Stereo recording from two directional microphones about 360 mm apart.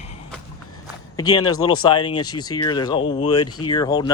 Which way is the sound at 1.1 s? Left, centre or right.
Centre.